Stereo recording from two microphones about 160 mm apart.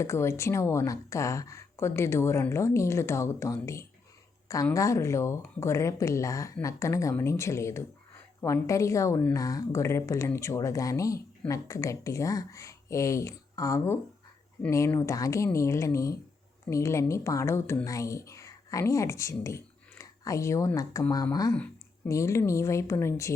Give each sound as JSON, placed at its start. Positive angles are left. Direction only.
{"t": 0.0, "sound": "speech", "side_deg": 15}
{"t": 21.5, "sound": "a sound", "side_deg": 10}
{"t": 22.1, "sound": "speech", "side_deg": 20}